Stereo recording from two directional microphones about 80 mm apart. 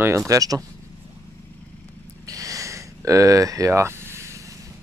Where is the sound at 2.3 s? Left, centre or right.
Right.